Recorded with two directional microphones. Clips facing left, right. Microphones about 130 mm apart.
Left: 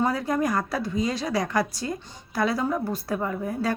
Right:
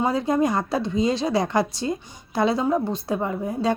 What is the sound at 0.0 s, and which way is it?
A woman's voice, 25° right (ahead or behind).